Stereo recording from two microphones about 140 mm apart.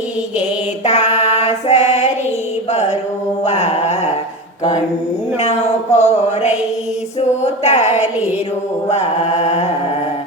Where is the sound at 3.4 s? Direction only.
50° left (ahead or behind).